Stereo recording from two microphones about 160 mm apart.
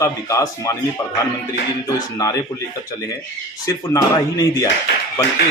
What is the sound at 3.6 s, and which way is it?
Speech, 20° left (ahead or behind).